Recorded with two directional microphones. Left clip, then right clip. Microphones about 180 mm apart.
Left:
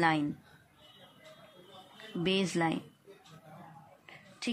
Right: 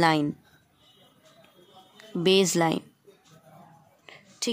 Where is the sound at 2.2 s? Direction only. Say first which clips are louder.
Right 9 dB; 50° right (ahead or behind).